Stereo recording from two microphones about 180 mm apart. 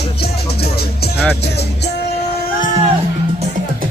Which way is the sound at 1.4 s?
65° left (ahead or behind).